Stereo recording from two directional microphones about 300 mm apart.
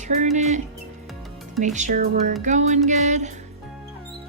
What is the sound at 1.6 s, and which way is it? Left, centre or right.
Music, right.